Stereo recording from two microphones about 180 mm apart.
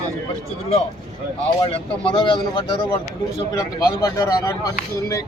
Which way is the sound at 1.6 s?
30° left (ahead or behind).